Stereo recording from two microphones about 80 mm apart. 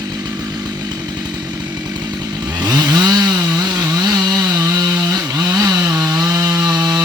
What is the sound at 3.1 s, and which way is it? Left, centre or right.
Chainsaw, right.